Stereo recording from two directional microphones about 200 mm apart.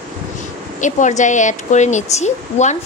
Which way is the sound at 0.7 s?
40° left (ahead or behind).